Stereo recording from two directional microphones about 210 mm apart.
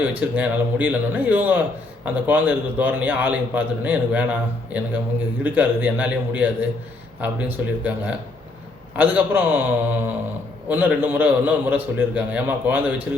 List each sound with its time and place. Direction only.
0.0 s a man's voice: 10° right (ahead or behind)